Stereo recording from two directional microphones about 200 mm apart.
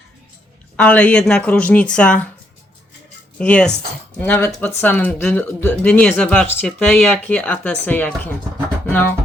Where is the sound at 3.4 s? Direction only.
5° left (ahead or behind).